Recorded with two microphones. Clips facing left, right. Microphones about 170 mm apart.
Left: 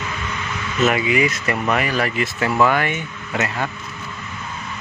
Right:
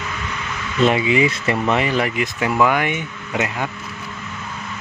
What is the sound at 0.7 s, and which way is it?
Speech, 30° right (ahead or behind).